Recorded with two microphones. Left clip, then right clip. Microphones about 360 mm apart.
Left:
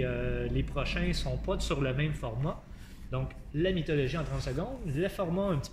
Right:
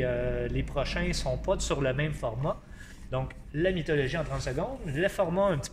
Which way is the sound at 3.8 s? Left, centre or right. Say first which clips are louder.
Right 3 dB; centre.